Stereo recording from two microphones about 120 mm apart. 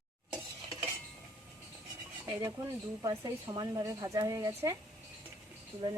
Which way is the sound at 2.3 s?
30° right (ahead or behind).